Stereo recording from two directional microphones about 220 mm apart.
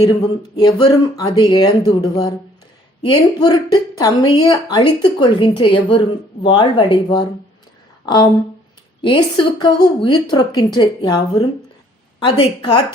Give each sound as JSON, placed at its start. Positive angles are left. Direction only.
{"t": 0.5, "sound": "a woman's voice", "side_deg": 20}
{"t": 12.2, "sound": "a woman's voice", "side_deg": 20}